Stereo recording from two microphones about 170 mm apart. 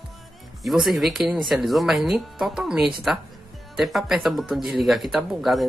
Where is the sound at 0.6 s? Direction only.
Centre (ahead or behind).